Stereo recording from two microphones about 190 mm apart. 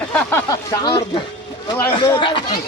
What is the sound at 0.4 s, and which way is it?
Speech, 20° left (ahead or behind).